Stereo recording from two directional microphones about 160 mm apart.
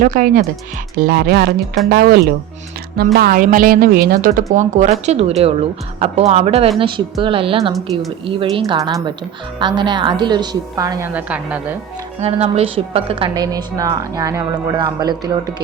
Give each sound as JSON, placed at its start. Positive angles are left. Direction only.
{"t": 0.0, "sound": "a woman's voice", "side_deg": -55}
{"t": 0.9, "sound": "a woman's voice", "side_deg": -70}
{"t": 4.5, "sound": "a woman's voice", "side_deg": -50}
{"t": 11.1, "sound": "a woman's voice", "side_deg": -10}
{"t": 12.2, "sound": "a woman's voice", "side_deg": -40}